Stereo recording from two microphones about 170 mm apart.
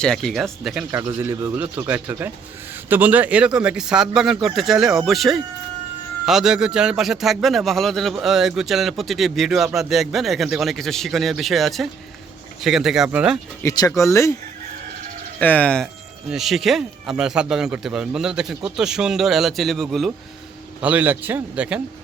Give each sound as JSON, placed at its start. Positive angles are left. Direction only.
{"t": 0.0, "sound": "a man's voice", "side_deg": 5}
{"t": 0.9, "sound": "a man's voice", "side_deg": -15}
{"t": 13.6, "sound": "speech", "side_deg": 20}
{"t": 15.4, "sound": "a man's voice", "side_deg": 10}
{"t": 20.8, "sound": "speech", "side_deg": -10}